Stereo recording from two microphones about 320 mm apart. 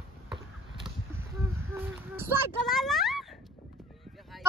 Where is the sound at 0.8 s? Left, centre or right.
Centre.